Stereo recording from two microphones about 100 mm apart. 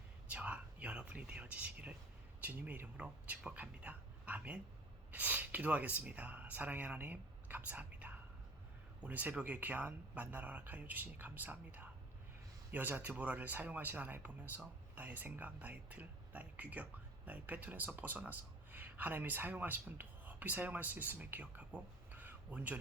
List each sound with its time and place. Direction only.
0.3 s speech: 15° right (ahead or behind)